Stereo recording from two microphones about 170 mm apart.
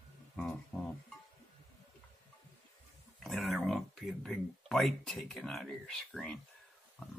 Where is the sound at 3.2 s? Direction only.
Centre (ahead or behind).